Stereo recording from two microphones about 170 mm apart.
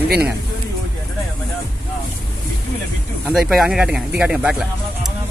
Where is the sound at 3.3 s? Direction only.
Centre (ahead or behind).